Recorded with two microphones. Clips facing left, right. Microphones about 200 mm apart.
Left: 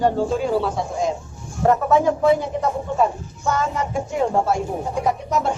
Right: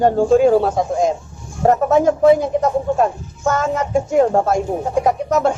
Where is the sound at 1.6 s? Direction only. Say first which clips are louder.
Right 3 dB; 40° right (ahead or behind).